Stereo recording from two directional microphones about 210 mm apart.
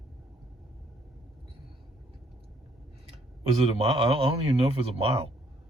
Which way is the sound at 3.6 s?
25° right (ahead or behind).